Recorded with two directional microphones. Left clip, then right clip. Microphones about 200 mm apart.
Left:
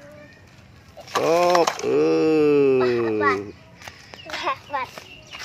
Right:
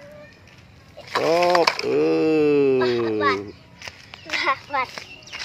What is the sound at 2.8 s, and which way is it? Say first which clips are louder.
Music: left 1 dB; 45° right (ahead or behind).